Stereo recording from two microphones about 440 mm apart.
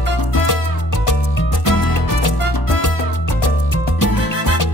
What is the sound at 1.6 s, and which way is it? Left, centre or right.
Music, left.